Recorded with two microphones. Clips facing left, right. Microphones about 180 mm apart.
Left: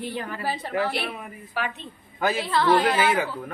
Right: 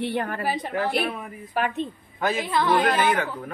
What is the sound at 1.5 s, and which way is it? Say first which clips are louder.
Speech: right 5 dB; 50° right (ahead or behind).